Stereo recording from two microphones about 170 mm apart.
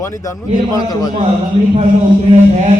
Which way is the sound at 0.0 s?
20° left (ahead or behind).